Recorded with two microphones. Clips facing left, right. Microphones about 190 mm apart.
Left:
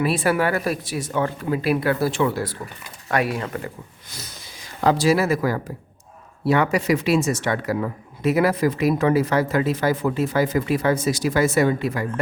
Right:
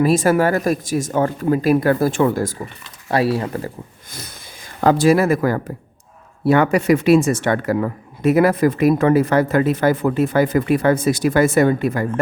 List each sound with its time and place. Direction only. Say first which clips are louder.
0.0 s speech: right 5 dB; 45° right (ahead or behind)
3.1 s speech: right 5 dB; 30° right (ahead or behind)
4.8 s speech: right 4 dB; 50° right (ahead or behind)